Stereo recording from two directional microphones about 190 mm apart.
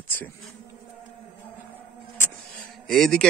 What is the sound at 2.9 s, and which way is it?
Speech, 5° left (ahead or behind).